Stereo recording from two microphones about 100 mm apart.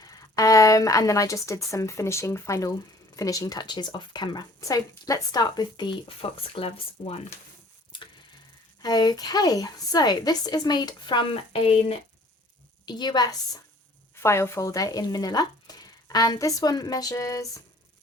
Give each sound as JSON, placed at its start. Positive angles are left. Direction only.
{"t": 0.0, "sound": "a woman's voice", "side_deg": 35}
{"t": 6.1, "sound": "speech", "side_deg": 65}
{"t": 8.8, "sound": "speech", "side_deg": 45}
{"t": 11.3, "sound": "speech", "side_deg": 70}
{"t": 12.8, "sound": "speech", "side_deg": 45}
{"t": 14.2, "sound": "speech", "side_deg": 25}